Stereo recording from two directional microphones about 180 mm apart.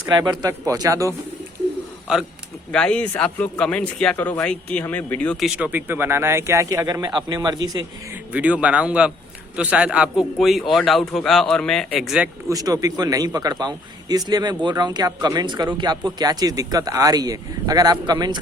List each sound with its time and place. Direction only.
0.1 s a man's voice: 20° right (ahead or behind)
2.7 s speech: 5° left (ahead or behind); by 7.9 s 20° right (ahead or behind)
8.1 s a man's voice: 10° right (ahead or behind)
12.5 s a man's voice: 20° right (ahead or behind)